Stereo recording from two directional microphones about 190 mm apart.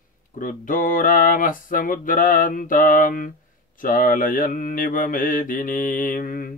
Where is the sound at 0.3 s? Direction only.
45° left (ahead or behind).